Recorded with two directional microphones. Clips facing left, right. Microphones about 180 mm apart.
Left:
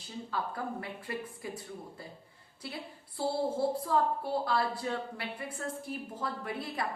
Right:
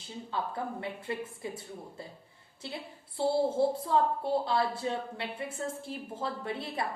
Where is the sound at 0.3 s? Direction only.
25° right (ahead or behind).